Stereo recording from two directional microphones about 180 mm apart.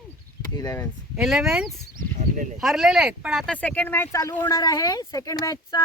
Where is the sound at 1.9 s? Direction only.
45° right (ahead or behind).